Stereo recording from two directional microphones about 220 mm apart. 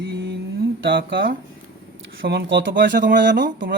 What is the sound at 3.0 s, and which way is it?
Speech, 40° right (ahead or behind).